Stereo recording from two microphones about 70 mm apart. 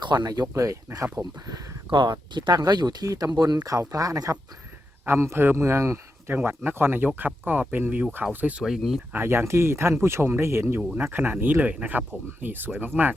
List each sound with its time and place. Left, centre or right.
0.0 s speech: right
0.5 s speech: right
1.1 s speech: right
2.0 s speech: right
3.1 s speech: right
5.0 s speech: right
6.3 s speech: right
8.6 s speech: centre
9.1 s speech: right